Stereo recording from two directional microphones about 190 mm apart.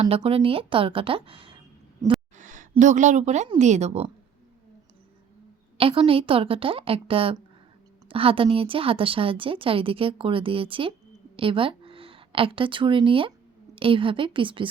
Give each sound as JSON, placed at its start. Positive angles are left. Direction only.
{"t": 0.1, "sound": "a woman's voice", "side_deg": -30}
{"t": 2.3, "sound": "speech", "side_deg": -40}
{"t": 5.7, "sound": "a woman's voice", "side_deg": -30}